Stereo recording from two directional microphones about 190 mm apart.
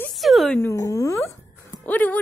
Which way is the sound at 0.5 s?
15° left (ahead or behind).